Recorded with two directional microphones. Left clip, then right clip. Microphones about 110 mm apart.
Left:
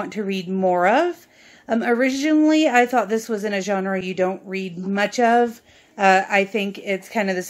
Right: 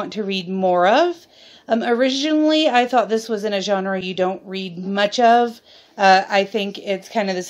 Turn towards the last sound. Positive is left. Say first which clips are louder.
# right 1 dB
turn(degrees=-15)  # may be behind; listen again after turning